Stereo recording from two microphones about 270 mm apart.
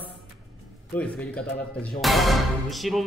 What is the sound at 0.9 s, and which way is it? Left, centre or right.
Speech, centre.